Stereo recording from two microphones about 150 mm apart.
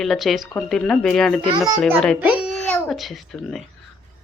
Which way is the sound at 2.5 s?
Centre (ahead or behind).